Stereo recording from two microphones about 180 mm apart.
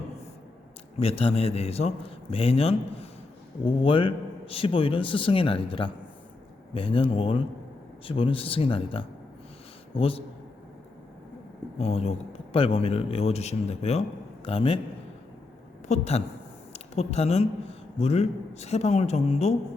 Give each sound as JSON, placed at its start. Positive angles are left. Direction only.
{"t": 0.9, "sound": "a man's voice", "side_deg": 35}
{"t": 11.8, "sound": "a man's voice", "side_deg": 35}
{"t": 15.9, "sound": "a man's voice", "side_deg": 35}